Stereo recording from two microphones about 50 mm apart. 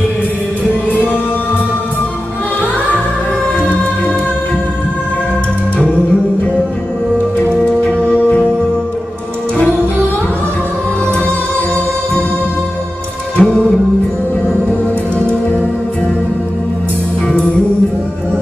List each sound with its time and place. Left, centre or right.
11.2 s music: right
13.4 s music: centre